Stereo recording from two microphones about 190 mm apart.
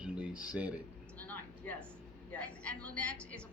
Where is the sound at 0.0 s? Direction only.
5° right (ahead or behind).